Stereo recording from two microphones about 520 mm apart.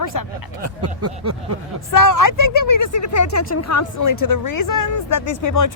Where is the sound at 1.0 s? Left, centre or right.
Right.